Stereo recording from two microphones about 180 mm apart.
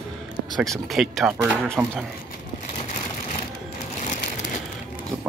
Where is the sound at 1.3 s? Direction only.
15° right (ahead or behind).